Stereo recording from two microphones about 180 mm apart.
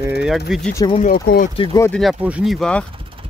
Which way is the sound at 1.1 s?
55° left (ahead or behind).